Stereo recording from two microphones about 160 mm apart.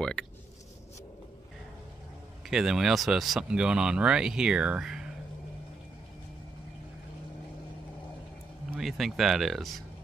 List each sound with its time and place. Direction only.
0.0 s speech: 5° left (ahead or behind)
2.5 s speech: 5° right (ahead or behind)
8.7 s speech: centre (ahead or behind)